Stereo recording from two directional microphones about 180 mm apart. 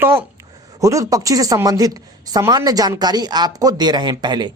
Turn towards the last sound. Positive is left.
turn(degrees=-25)  # may be behind; listen again after turning